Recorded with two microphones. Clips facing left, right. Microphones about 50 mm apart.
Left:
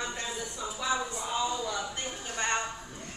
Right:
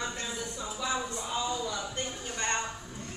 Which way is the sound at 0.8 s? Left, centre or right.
Centre.